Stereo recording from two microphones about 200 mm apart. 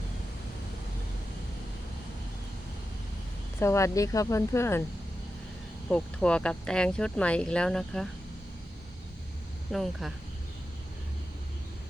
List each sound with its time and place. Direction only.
3.6 s speech: 15° left (ahead or behind)
5.9 s speech: 5° left (ahead or behind)
9.7 s speech: centre (ahead or behind)